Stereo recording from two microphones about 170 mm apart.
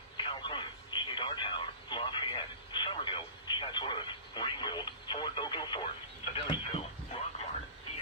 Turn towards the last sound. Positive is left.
turn(degrees=30)  # may be behind; listen again after turning